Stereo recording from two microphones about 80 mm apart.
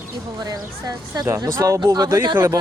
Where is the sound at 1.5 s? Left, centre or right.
Right.